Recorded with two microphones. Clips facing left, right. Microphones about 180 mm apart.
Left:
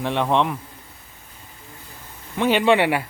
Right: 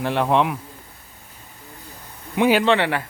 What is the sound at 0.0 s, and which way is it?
Speech, centre (ahead or behind).